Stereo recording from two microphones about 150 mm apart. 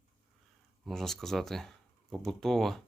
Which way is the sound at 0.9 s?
Centre (ahead or behind).